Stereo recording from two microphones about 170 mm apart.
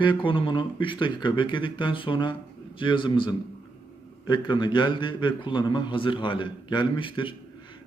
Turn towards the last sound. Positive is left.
turn(degrees=30)  # may be behind; listen again after turning